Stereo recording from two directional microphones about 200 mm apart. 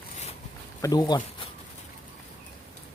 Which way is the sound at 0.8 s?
20° left (ahead or behind).